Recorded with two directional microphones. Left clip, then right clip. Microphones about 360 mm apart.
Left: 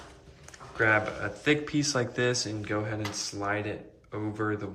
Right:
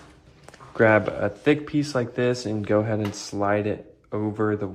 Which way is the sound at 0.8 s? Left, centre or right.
Centre.